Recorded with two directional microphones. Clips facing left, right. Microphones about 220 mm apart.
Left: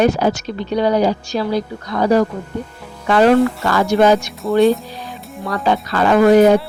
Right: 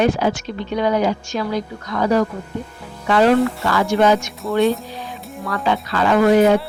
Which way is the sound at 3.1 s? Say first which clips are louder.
Left 2 dB; 50° left (ahead or behind).